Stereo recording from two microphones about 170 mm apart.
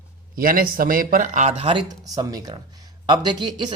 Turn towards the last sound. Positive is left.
turn(degrees=-25)  # may be behind; listen again after turning